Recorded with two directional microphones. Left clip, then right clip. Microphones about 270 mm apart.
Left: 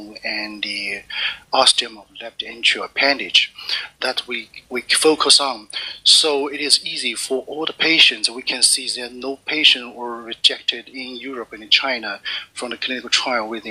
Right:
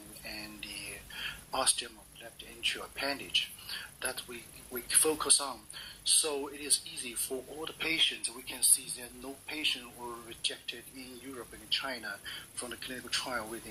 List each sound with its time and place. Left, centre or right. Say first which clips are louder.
0.3 s music: left 19 dB; left
1.1 s speech: left 17 dB; left